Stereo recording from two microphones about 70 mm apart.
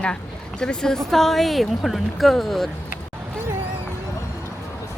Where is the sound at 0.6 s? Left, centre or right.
Centre.